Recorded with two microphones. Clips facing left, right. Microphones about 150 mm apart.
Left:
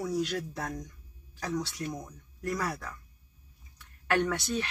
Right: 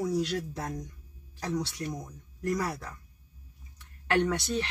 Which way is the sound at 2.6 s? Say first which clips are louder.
Right 1 dB; 20° right (ahead or behind).